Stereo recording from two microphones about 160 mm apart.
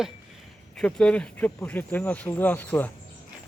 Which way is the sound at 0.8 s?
5° left (ahead or behind).